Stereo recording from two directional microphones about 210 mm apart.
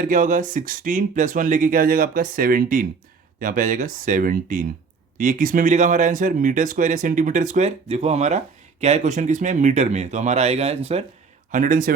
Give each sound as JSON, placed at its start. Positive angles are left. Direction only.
{"t": 0.0, "sound": "speech", "side_deg": -40}
{"t": 11.5, "sound": "speech", "side_deg": -40}